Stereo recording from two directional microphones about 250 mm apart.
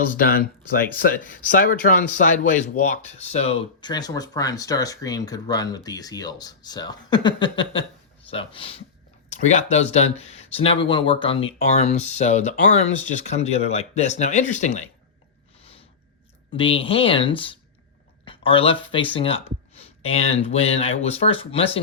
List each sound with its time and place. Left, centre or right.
0.1 s speech: left
15.5 s a sound: left
16.5 s speech: left